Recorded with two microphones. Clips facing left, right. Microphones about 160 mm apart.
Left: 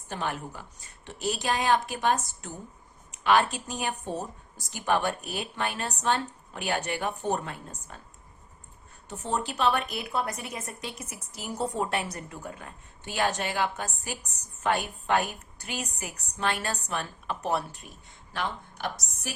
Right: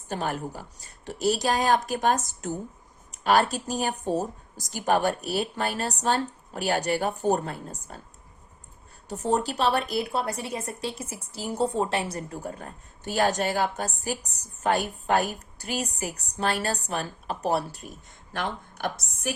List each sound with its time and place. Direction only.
0.1 s a woman's voice: 40° right (ahead or behind)
9.0 s a woman's voice: 40° right (ahead or behind)
18.3 s a woman's voice: 50° right (ahead or behind)